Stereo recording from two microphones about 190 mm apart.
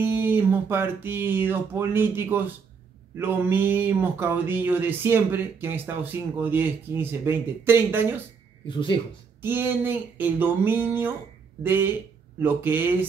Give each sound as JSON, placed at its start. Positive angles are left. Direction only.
{"t": 0.0, "sound": "speech", "side_deg": -10}
{"t": 8.6, "sound": "speech", "side_deg": 25}
{"t": 9.4, "sound": "speech", "side_deg": -10}